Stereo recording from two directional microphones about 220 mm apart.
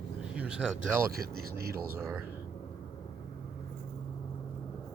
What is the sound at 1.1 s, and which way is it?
Speech, 45° right (ahead or behind).